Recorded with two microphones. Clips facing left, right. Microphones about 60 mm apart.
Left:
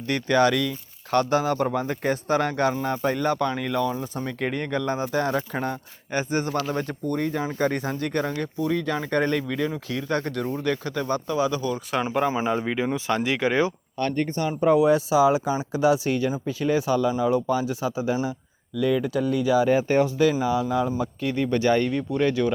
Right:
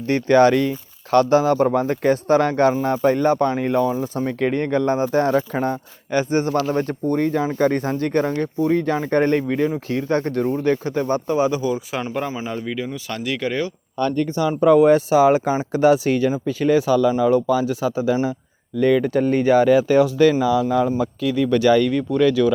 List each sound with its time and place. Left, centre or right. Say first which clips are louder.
0.1 s speech: right 6 dB; right
4.3 s speech: right 6 dB; right
11.9 s speech: left 1 dB; centre
12.5 s speech: left 2 dB; centre
14.8 s speech: right 4 dB; right
19.1 s speech: right 5 dB; right
19.6 s speech: right 5 dB; right